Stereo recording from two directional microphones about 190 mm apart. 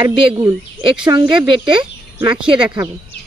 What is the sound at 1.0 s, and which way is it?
Speech, 25° right (ahead or behind).